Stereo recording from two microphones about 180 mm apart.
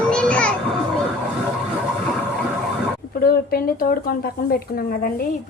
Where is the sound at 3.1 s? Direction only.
55° left (ahead or behind).